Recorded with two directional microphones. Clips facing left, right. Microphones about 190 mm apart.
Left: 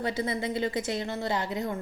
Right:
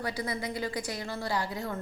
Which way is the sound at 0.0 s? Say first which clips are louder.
Left 4 dB; 25° left (ahead or behind).